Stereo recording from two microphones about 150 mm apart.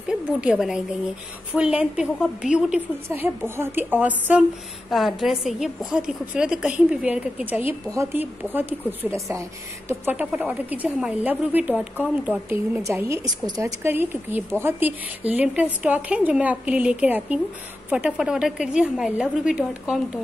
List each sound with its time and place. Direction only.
0.1 s a woman's voice: 5° right (ahead or behind)
3.1 s a woman's voice: 15° right (ahead or behind)